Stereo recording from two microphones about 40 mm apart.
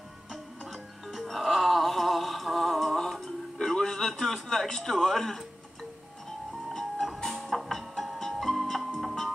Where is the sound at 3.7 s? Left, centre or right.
Centre.